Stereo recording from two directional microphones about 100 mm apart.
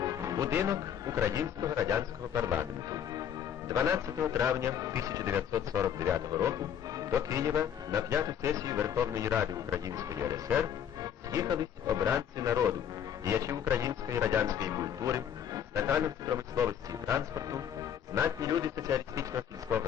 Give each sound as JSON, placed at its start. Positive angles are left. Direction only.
{"t": 0.0, "sound": "music", "side_deg": -35}
{"t": 0.6, "sound": "speech", "side_deg": -35}
{"t": 2.9, "sound": "music", "side_deg": -35}
{"t": 3.7, "sound": "speech", "side_deg": -30}
{"t": 11.0, "sound": "music", "side_deg": -35}
{"t": 12.0, "sound": "speech", "side_deg": -25}
{"t": 18.4, "sound": "speech", "side_deg": -40}